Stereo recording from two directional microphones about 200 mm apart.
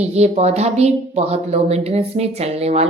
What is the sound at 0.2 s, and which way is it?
A woman's voice, 35° right (ahead or behind).